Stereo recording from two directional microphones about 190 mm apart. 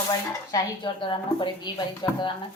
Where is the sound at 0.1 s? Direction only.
20° left (ahead or behind).